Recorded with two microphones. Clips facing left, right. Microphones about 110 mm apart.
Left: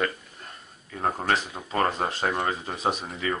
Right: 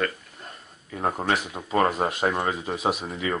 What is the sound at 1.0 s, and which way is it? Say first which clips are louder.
Speech: right 1 dB; 15° right (ahead or behind).